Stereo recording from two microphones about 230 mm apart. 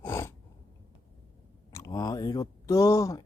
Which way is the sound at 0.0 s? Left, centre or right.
Centre.